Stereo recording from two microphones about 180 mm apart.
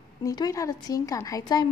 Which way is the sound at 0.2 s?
20° left (ahead or behind).